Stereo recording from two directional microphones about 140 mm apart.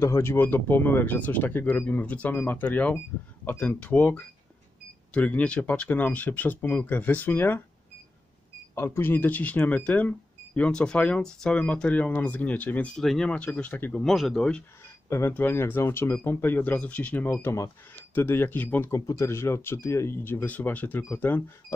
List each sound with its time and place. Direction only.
0.0 s speech: 20° left (ahead or behind)
8.7 s speech: 15° left (ahead or behind)
14.0 s speech: centre (ahead or behind)
15.0 s speech: 20° left (ahead or behind)